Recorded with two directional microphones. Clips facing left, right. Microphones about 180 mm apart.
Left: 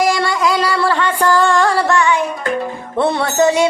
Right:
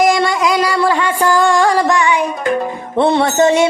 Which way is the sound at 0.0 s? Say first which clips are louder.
Right 2 dB; 20° right (ahead or behind).